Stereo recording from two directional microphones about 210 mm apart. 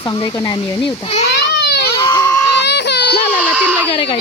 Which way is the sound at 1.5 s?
50° left (ahead or behind).